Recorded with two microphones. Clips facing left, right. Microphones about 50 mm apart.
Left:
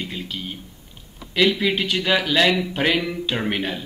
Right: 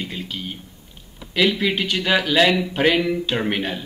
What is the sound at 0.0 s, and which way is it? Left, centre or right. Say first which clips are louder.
Speech: right 1 dB; centre.